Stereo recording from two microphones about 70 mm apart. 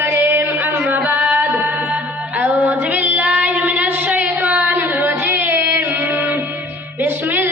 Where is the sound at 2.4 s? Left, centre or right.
Right.